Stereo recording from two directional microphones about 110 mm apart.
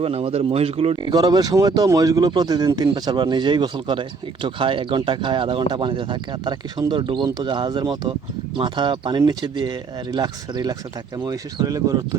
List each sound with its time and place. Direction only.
0.0 s speech: 60° right (ahead or behind)
1.0 s speech: 35° right (ahead or behind)